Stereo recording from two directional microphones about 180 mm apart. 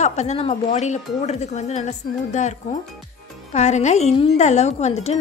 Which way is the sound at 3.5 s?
40° left (ahead or behind).